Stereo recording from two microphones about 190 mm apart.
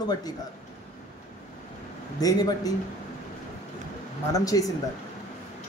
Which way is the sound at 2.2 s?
20° left (ahead or behind).